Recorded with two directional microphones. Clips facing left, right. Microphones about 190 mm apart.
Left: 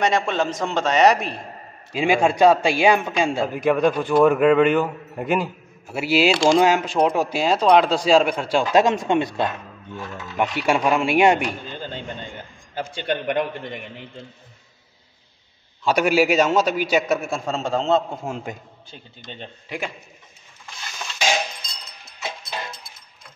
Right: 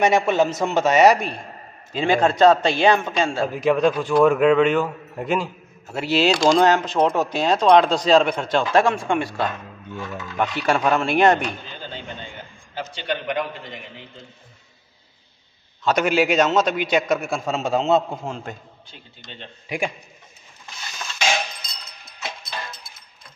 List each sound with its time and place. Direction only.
0.0 s a man's voice: 10° right (ahead or behind); by 9.5 s 20° left (ahead or behind)
10.1 s speech: 5° left (ahead or behind)
12.9 s a man's voice: 50° left (ahead or behind)
15.8 s speech: 10° left (ahead or behind)
18.2 s speech: 10° left (ahead or behind)
19.7 s a man's voice: 15° right (ahead or behind)